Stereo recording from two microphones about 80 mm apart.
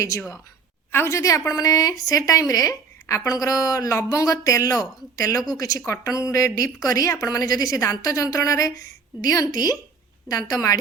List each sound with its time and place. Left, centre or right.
0.9 s a woman's voice: left